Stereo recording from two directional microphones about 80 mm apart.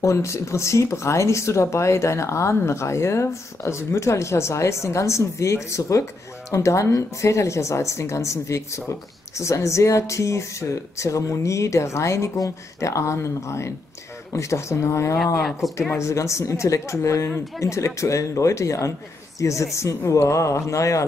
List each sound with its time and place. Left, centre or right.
0.0 s speech: left
15.4 s speech: centre
15.9 s speech: left